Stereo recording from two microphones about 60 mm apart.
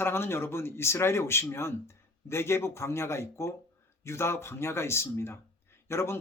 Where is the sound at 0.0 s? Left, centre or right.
Left.